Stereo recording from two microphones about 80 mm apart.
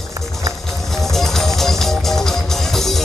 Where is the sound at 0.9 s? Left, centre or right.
Centre.